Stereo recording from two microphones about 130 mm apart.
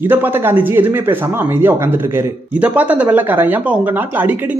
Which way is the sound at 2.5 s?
10° right (ahead or behind).